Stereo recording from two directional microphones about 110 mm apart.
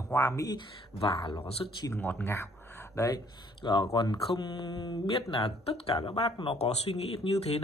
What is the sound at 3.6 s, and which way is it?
Speech, 45° left (ahead or behind).